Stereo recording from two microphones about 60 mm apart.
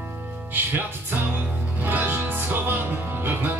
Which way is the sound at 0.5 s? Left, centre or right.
Right.